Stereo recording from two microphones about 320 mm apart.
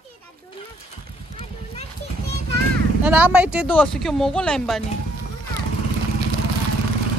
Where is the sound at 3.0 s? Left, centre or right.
Centre.